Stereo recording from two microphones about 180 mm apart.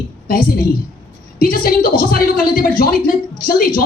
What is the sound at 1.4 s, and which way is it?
A woman's voice, 55° left (ahead or behind).